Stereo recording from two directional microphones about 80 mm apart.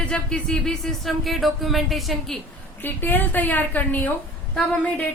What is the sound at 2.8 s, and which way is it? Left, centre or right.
A woman's voice, left.